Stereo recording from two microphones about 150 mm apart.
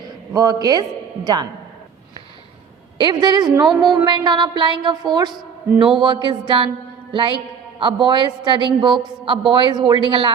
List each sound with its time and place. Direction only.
0.1 s a woman's voice: 25° right (ahead or behind)
3.0 s a woman's voice: 30° right (ahead or behind)
7.1 s music: 35° right (ahead or behind)
7.8 s a man's voice: 35° right (ahead or behind)